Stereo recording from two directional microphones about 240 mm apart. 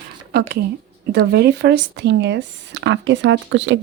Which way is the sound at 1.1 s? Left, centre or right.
Right.